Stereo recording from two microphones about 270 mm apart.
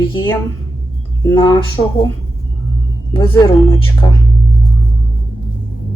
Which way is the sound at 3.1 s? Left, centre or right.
Centre.